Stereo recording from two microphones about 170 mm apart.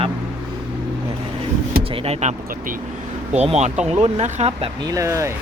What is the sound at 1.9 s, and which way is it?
Speech, 35° right (ahead or behind).